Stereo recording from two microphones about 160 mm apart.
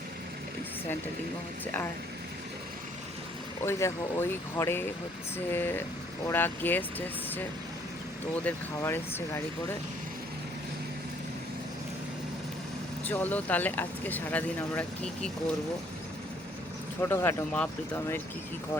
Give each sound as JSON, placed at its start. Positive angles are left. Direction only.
{"t": 1.6, "sound": "speech", "side_deg": 10}
{"t": 3.6, "sound": "speech", "side_deg": 15}
{"t": 8.4, "sound": "speech", "side_deg": 15}
{"t": 13.1, "sound": "speech", "side_deg": 10}
{"t": 17.0, "sound": "speech", "side_deg": 15}